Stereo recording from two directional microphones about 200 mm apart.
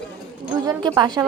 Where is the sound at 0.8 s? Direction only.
20° right (ahead or behind).